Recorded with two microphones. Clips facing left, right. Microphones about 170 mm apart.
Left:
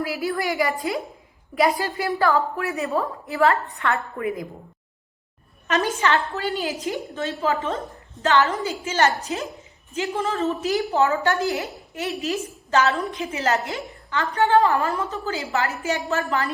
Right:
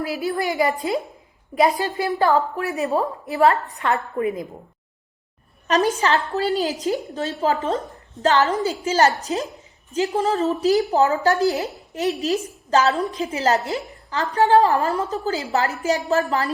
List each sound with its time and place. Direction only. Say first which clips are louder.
0.1 s a woman's voice: right 1 dB; 20° right (ahead or behind)
5.6 s a woman's voice: right 3 dB; 35° right (ahead or behind)